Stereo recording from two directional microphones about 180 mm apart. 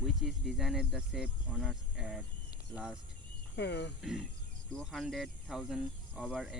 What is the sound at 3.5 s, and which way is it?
Speech, 70° left (ahead or behind).